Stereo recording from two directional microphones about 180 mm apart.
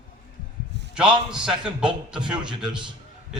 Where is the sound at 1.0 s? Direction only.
25° right (ahead or behind).